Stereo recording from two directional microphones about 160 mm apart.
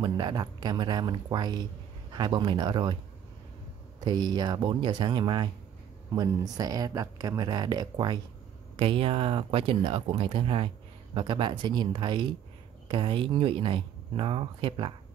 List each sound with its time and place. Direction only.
0.0 s speech: 25° right (ahead or behind)
4.0 s speech: 25° right (ahead or behind)